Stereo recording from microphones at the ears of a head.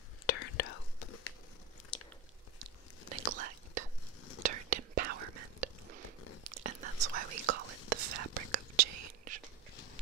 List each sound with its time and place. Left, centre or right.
0.3 s whispering: left
2.6 s whispering: right